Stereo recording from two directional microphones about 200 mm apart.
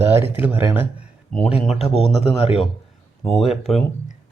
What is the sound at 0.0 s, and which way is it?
Speech, 10° right (ahead or behind).